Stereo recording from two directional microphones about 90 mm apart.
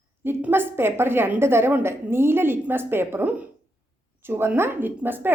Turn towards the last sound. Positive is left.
turn(degrees=-20)  # may be behind; listen again after turning